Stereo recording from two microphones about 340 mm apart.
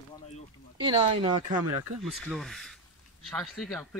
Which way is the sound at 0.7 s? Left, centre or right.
Centre.